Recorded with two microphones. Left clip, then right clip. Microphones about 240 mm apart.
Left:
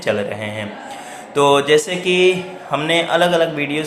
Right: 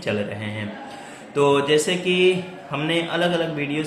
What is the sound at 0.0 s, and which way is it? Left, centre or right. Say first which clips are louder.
Speech: left 6 dB; centre.